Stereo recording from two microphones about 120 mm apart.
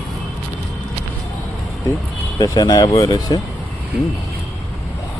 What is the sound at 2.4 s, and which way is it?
Speech, 35° left (ahead or behind).